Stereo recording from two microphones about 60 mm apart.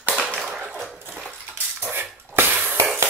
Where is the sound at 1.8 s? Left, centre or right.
Right.